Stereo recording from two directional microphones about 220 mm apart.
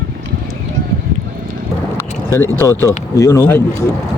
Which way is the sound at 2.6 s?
15° left (ahead or behind).